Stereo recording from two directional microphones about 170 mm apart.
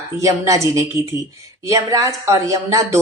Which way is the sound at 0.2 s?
20° right (ahead or behind).